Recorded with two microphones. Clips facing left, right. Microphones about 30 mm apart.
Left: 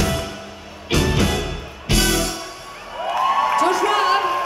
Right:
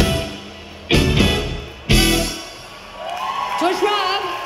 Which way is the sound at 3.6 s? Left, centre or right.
Centre.